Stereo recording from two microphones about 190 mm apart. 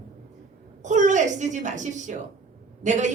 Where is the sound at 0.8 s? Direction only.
40° right (ahead or behind).